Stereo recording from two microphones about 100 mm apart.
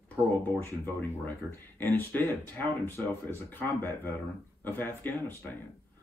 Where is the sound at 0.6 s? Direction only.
20° left (ahead or behind).